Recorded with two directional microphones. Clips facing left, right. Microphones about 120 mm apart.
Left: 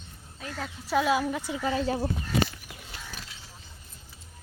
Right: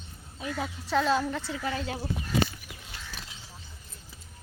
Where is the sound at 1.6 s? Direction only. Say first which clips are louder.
Left 8 dB; 30° left (ahead or behind).